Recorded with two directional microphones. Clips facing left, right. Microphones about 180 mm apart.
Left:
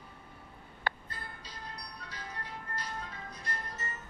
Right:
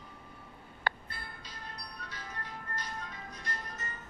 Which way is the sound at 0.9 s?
60° right (ahead or behind).